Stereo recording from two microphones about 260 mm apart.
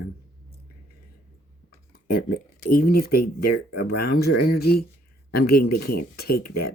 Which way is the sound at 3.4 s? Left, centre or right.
Left.